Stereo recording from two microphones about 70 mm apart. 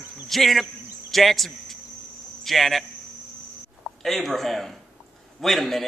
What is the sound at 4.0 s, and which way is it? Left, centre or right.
Speech, centre.